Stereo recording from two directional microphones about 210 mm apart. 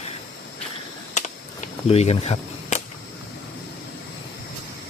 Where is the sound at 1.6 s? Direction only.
30° left (ahead or behind).